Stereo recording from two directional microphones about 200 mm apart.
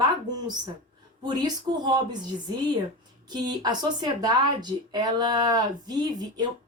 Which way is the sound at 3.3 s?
20° right (ahead or behind).